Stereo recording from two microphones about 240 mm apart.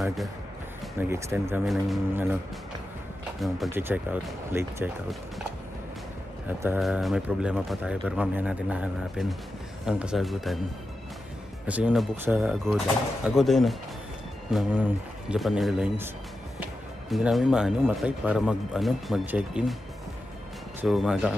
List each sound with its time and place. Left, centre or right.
0.9 s speech: centre
3.3 s speech: centre
6.6 s speech: centre
11.6 s speech: centre
17.1 s speech: centre
20.8 s speech: centre